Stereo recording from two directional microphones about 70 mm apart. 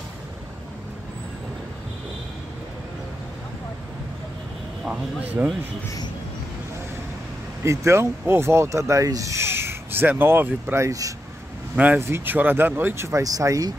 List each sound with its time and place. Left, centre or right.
4.8 s speech: centre
7.6 s speech: right
10.8 s speech: right
11.7 s speech: right
13.2 s speech: right